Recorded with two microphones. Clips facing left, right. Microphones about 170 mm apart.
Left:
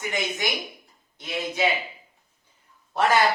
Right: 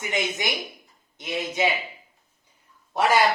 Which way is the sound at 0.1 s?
20° right (ahead or behind).